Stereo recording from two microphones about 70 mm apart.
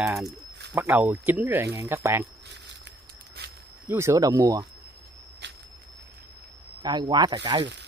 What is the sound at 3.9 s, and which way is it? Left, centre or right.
Speech, right.